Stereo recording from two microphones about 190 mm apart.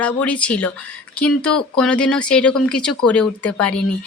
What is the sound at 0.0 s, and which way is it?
A woman's voice, 5° left (ahead or behind).